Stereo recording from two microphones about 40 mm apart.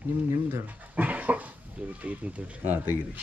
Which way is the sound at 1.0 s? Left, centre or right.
Right.